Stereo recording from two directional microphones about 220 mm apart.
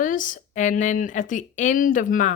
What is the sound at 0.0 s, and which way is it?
A woman's voice, 35° left (ahead or behind).